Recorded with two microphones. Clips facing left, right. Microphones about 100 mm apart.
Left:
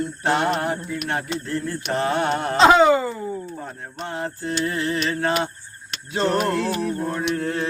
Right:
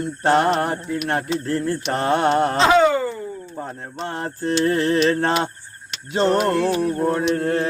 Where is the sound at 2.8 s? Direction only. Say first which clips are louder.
Left 1 dB; 10° left (ahead or behind).